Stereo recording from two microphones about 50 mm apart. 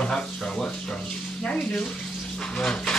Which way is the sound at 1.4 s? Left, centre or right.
Centre.